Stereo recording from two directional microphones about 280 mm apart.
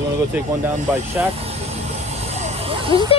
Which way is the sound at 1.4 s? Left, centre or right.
Right.